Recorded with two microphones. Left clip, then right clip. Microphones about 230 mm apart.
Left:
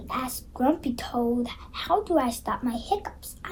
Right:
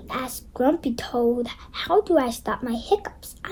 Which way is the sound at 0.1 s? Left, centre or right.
Right.